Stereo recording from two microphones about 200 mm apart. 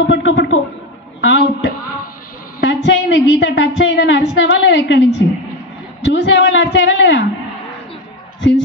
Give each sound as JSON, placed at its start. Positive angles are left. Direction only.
{"t": 0.0, "sound": "a woman's voice", "side_deg": 60}
{"t": 8.4, "sound": "speech", "side_deg": 65}